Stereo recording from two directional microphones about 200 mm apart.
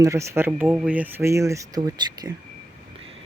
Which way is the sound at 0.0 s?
15° right (ahead or behind).